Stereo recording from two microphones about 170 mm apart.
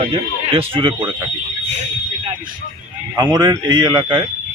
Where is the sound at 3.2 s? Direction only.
25° right (ahead or behind).